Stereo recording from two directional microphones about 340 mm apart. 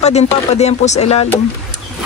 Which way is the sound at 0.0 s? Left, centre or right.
Centre.